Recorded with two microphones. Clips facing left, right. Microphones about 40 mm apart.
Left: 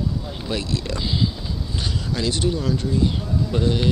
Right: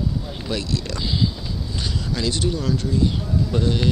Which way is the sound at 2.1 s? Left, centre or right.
Left.